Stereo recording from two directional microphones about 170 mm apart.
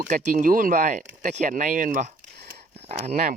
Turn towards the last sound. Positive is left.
turn(degrees=-40)  # may be behind; listen again after turning